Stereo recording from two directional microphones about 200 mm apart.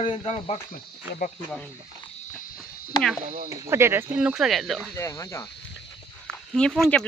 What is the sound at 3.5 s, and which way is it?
Speech, 15° right (ahead or behind).